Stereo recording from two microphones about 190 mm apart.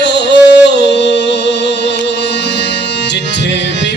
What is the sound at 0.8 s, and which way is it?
Music, 65° left (ahead or behind).